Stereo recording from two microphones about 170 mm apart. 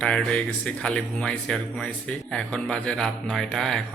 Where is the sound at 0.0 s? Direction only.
5° left (ahead or behind).